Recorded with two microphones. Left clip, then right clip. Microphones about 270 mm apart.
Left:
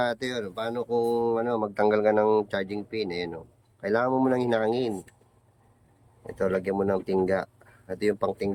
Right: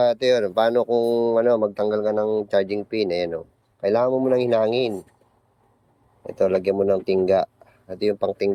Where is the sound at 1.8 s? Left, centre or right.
Left.